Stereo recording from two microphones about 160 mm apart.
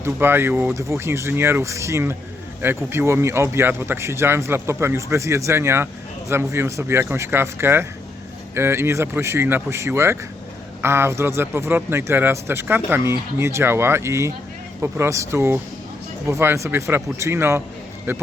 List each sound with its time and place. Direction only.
0.0 s speech: 15° right (ahead or behind)